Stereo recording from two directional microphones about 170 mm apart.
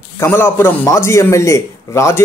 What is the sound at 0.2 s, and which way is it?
Speech, 15° left (ahead or behind).